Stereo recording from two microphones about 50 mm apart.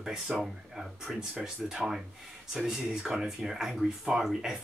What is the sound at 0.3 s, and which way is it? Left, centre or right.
Speech, right.